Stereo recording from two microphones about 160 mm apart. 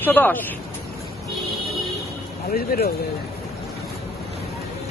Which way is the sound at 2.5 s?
70° left (ahead or behind).